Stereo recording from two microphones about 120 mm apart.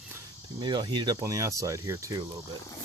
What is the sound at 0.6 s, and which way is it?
Speech, 40° right (ahead or behind).